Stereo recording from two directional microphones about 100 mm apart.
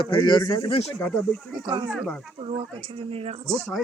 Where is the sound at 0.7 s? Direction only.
90° left.